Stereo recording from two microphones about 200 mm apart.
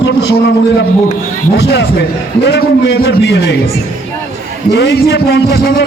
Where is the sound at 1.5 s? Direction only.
60° left (ahead or behind).